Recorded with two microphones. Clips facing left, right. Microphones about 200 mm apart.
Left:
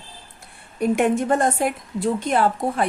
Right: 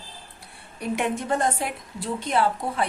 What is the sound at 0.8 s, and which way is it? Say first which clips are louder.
A woman's voice: left 7 dB; 50° left (ahead or behind).